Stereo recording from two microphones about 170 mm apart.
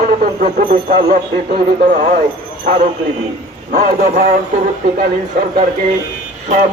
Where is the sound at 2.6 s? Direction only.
55° right (ahead or behind).